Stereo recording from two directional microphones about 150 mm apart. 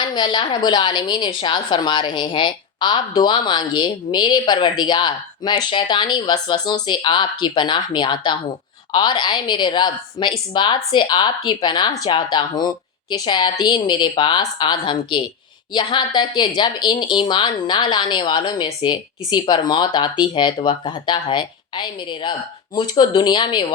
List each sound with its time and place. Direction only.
0.1 s a woman's voice: 30° left (ahead or behind)